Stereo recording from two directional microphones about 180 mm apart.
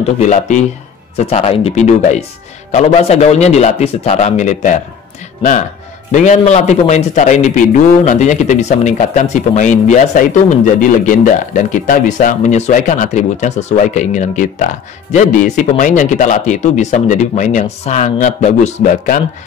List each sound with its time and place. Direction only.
0.2 s a man's voice: 40° left (ahead or behind)
6.1 s a man's voice: 45° left (ahead or behind)